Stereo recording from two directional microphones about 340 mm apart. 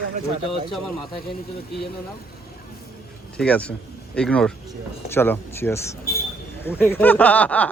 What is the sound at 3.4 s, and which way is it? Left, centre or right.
Speech, centre.